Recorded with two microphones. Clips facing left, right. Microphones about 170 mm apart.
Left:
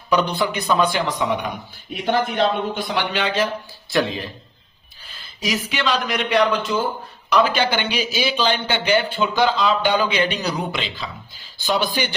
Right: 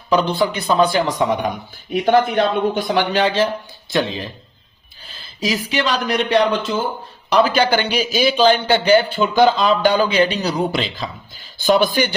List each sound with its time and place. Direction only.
0.1 s a man's voice: 30° right (ahead or behind)
5.1 s a man's voice: 30° right (ahead or behind)
9.1 s a man's voice: 45° right (ahead or behind)
11.6 s speech: 50° right (ahead or behind)